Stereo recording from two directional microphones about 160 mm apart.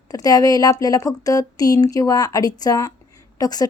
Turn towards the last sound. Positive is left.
turn(degrees=25)  # may be behind; listen again after turning